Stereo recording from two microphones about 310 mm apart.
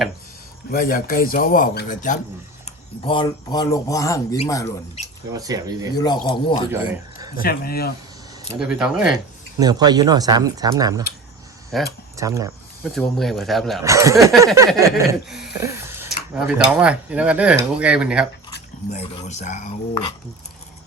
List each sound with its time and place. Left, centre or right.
0.7 s speech: left; by 4.7 s centre
5.3 s speech: centre
6.2 s speech: centre
7.2 s a sound: centre
7.4 s speech: left
8.4 s speech: centre
9.1 s speech: centre
11.7 s speech: centre
12.1 s speech: centre
12.9 s speech: centre
18.5 s speech: left